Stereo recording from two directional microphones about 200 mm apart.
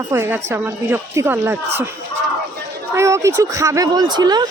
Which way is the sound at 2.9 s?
15° right (ahead or behind).